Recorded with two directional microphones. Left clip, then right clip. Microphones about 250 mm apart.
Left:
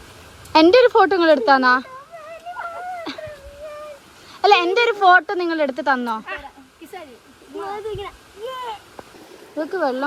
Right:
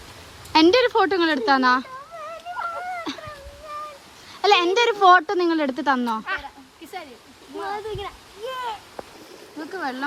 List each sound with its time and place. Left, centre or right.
0.5 s speech: centre
2.6 s a sound: centre
4.4 s speech: centre
7.5 s speech: centre
9.6 s speech: centre